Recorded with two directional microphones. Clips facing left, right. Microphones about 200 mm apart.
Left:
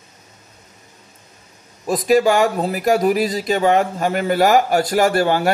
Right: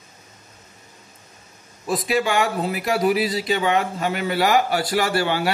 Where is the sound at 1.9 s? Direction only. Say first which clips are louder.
Left 7 dB; 40° left (ahead or behind).